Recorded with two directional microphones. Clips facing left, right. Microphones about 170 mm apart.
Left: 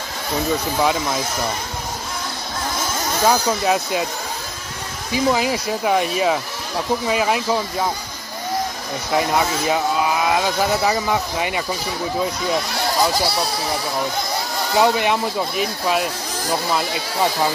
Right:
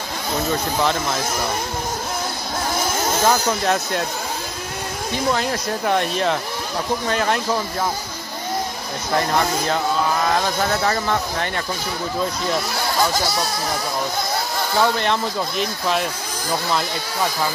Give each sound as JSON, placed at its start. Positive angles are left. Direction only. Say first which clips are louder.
{"t": 3.2, "sound": "speech", "louder": "left 3 dB", "side_deg": 10}
{"t": 5.1, "sound": "speech", "louder": "left 3 dB", "side_deg": 5}
{"t": 9.1, "sound": "speech", "louder": "left 1 dB", "side_deg": 5}
{"t": 13.1, "sound": "speech", "louder": "left 1 dB", "side_deg": 30}
{"t": 14.7, "sound": "speech", "louder": "left 3 dB", "side_deg": 15}